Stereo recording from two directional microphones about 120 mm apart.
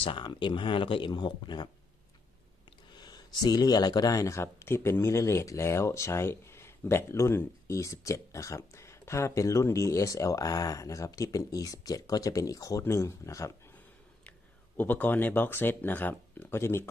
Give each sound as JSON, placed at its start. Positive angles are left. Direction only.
{"t": 0.0, "sound": "speech", "side_deg": 40}
{"t": 2.9, "sound": "speech", "side_deg": 35}
{"t": 14.8, "sound": "speech", "side_deg": 15}